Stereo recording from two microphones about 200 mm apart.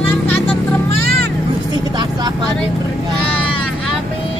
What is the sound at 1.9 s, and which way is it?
Vehicle, 20° right (ahead or behind).